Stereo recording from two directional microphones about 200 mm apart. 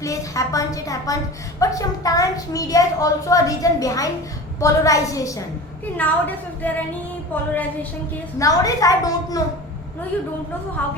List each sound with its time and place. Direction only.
0.0 s a woman's voice: 15° left (ahead or behind)